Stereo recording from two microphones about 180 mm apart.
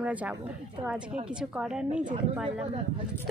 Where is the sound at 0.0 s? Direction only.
10° right (ahead or behind).